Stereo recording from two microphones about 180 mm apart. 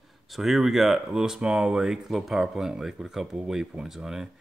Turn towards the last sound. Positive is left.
turn(degrees=-5)  # may be behind; listen again after turning